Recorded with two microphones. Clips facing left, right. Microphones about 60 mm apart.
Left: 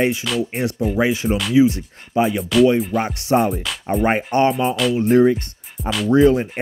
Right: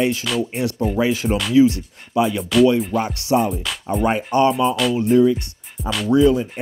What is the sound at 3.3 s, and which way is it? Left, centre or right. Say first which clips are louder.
Music: left 1 dB; left.